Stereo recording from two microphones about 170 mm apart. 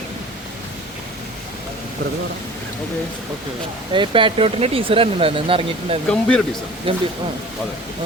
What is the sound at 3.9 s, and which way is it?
Speech, 30° right (ahead or behind).